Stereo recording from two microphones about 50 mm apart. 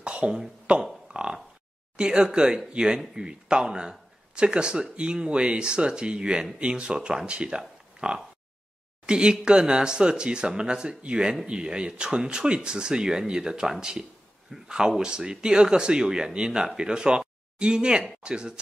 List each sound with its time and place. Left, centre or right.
0.0 s a sound: right
0.7 s speech: right
1.1 s oink: right
2.0 s speech: centre